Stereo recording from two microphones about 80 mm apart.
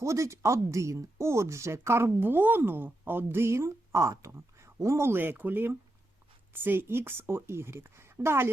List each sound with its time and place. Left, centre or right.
0.0 s a woman's voice: right